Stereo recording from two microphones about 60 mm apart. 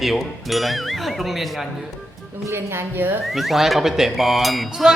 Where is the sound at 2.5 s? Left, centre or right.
Right.